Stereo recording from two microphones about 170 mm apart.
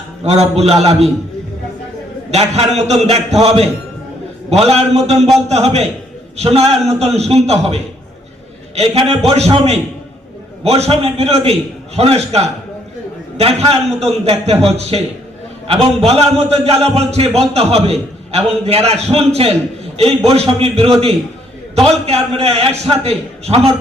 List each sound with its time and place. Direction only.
0.3 s a man's voice: 40° right (ahead or behind)
2.3 s a man's voice: 40° right (ahead or behind)
8.7 s a man's voice: 35° right (ahead or behind)
22.0 s a man's voice: 35° right (ahead or behind)